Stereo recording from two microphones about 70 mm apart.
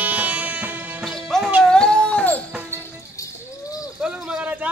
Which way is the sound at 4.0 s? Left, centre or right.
Centre.